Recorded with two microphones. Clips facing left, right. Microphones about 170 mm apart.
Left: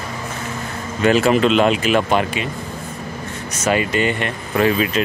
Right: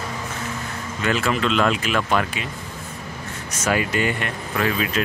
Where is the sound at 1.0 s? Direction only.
25° left (ahead or behind).